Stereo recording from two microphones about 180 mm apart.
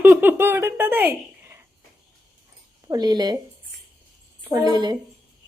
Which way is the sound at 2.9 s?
20° right (ahead or behind).